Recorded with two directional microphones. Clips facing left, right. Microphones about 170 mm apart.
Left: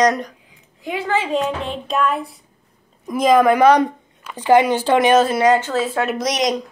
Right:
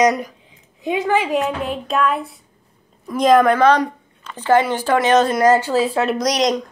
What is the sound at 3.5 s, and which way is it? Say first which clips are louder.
Speech: left 2 dB; 15° left (ahead or behind).